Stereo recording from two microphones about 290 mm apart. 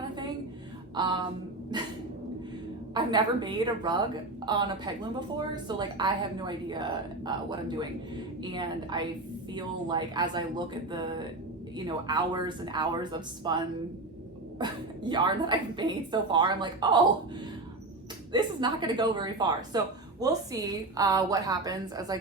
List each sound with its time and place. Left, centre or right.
0.9 s speech: centre
2.9 s a woman's voice: centre
18.3 s speech: centre